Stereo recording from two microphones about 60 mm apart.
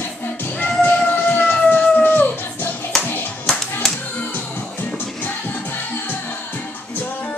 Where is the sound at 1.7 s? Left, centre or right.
Left.